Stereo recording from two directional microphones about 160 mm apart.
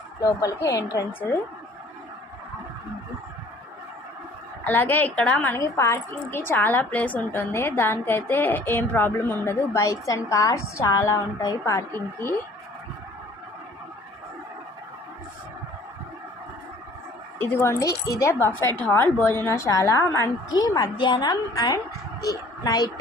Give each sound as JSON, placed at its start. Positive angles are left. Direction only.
{"t": 0.2, "sound": "speech", "side_deg": 20}
{"t": 4.6, "sound": "a woman's voice", "side_deg": 10}
{"t": 5.5, "sound": "a woman's voice", "side_deg": 20}
{"t": 17.3, "sound": "a woman's voice", "side_deg": 15}